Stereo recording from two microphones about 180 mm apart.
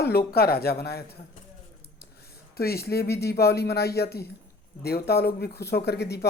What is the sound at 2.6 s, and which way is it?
A woman's voice, 60° left (ahead or behind).